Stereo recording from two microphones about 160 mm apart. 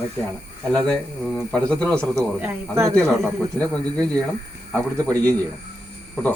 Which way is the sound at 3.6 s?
5° left (ahead or behind).